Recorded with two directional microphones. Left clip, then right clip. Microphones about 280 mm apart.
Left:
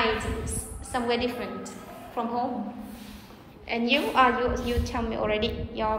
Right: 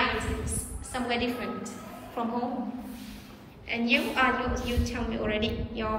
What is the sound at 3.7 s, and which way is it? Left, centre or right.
A woman's voice, centre.